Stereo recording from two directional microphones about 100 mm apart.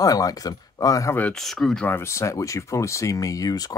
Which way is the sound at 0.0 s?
35° left (ahead or behind).